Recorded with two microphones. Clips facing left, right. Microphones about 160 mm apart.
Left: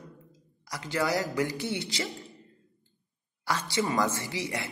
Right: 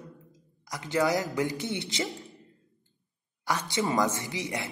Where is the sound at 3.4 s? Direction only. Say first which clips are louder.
Even; 15° right (ahead or behind).